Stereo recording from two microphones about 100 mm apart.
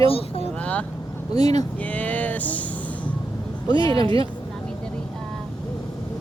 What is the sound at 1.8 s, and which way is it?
Music, 15° left (ahead or behind).